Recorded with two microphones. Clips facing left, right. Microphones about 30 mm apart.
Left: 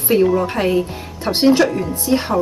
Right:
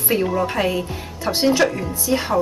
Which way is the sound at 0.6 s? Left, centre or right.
Centre.